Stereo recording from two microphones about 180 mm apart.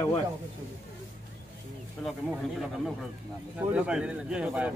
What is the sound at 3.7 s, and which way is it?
Speech, 5° right (ahead or behind).